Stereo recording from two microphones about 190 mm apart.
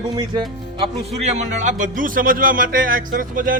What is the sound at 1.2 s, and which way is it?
Speech, 35° right (ahead or behind).